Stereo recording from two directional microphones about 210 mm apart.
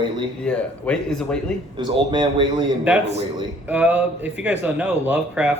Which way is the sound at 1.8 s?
20° right (ahead or behind).